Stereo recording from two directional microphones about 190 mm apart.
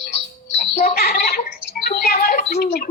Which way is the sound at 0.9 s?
55° left (ahead or behind).